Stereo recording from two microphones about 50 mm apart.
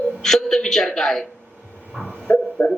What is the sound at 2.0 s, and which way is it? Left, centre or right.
Dog, right.